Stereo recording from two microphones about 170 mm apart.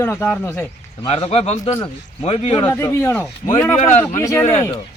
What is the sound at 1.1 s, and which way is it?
A man's voice, 35° left (ahead or behind).